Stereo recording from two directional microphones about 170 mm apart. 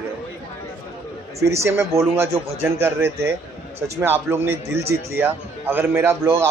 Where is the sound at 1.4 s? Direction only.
15° right (ahead or behind).